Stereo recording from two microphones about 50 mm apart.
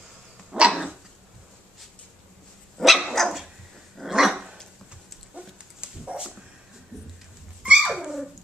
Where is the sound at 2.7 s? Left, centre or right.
Centre; by 6.3 s right.